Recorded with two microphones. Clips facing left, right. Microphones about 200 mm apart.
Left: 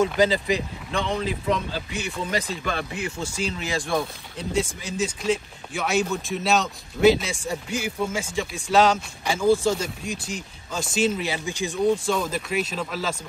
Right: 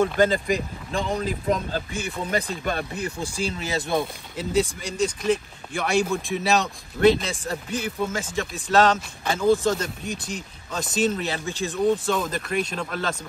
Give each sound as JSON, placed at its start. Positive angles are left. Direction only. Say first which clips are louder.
{"t": 0.2, "sound": "speech", "louder": "even", "side_deg": -50}
{"t": 4.0, "sound": "speech", "louder": "right 2 dB", "side_deg": 0}
{"t": 12.1, "sound": "speech", "louder": "even", "side_deg": 0}